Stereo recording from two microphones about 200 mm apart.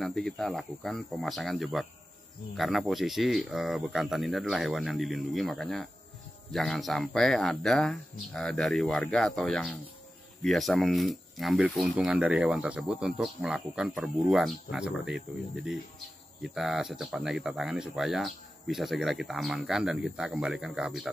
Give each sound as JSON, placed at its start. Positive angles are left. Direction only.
{"t": 0.0, "sound": "speech", "side_deg": 0}